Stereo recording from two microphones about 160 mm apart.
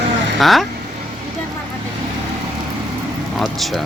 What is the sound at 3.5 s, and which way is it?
Speech, centre (ahead or behind).